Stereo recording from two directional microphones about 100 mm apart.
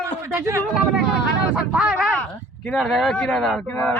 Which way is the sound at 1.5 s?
5° right (ahead or behind).